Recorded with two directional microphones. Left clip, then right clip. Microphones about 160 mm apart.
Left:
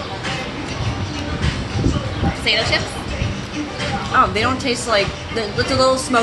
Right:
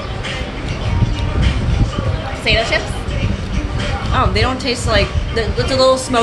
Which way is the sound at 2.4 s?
35° right (ahead or behind).